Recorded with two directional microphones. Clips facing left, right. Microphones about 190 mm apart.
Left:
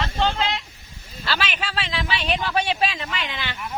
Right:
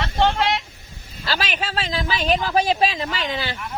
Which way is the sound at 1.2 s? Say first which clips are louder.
Right 2 dB; 40° right (ahead or behind).